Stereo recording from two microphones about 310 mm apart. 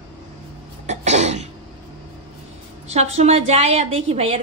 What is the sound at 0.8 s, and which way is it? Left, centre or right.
Throat clearing, right.